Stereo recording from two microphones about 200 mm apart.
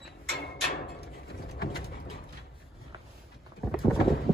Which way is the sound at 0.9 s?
50° left (ahead or behind).